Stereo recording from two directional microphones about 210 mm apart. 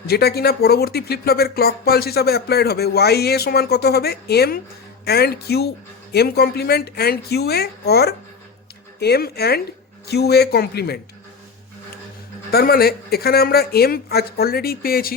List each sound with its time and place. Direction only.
0.1 s speech: 50° left (ahead or behind)
12.5 s speech: 45° left (ahead or behind)